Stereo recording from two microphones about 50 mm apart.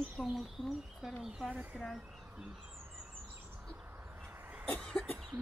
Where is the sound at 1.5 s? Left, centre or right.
Right.